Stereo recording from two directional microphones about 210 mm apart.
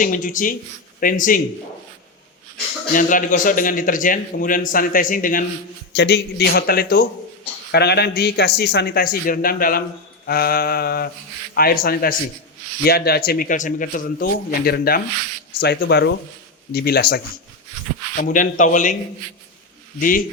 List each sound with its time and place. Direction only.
0.0 s a man's voice: 40° left (ahead or behind)
2.9 s a man's voice: 40° left (ahead or behind)
5.9 s a man's voice: 55° left (ahead or behind)
18.2 s a man's voice: 40° left (ahead or behind)
20.0 s a man's voice: 40° left (ahead or behind)